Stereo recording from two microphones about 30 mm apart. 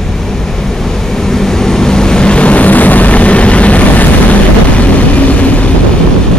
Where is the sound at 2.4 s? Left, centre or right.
Left.